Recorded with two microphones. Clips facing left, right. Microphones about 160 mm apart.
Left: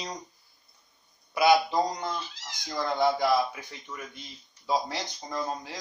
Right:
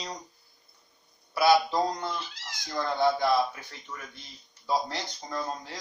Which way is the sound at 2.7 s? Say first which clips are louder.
Even; 15° left (ahead or behind).